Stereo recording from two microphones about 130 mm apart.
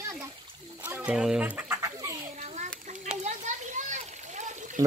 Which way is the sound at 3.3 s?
70° right (ahead or behind).